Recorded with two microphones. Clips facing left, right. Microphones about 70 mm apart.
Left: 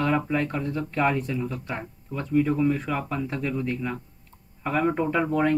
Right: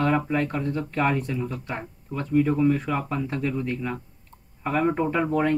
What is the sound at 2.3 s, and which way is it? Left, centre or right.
Speech, centre.